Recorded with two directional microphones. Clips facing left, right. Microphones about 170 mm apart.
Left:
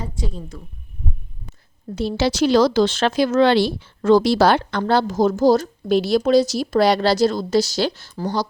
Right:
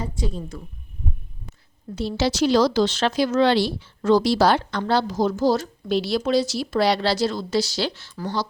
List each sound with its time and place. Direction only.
2.0 s speech: 55° left (ahead or behind); by 8.4 s 40° left (ahead or behind)